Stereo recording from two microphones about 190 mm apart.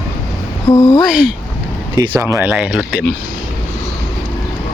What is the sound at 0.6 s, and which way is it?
Speech, 20° left (ahead or behind).